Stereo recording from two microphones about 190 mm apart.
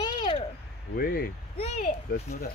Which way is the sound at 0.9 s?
50° left (ahead or behind).